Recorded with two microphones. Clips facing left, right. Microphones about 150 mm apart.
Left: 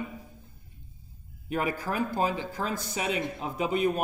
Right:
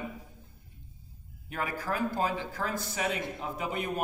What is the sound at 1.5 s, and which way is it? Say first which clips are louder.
A man's voice: left 4 dB; 20° left (ahead or behind).